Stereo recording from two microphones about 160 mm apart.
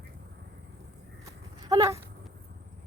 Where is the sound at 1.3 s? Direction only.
20° right (ahead or behind).